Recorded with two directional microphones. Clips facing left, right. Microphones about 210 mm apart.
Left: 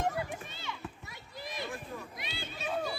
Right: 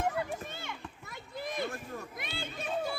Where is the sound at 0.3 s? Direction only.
50° right (ahead or behind).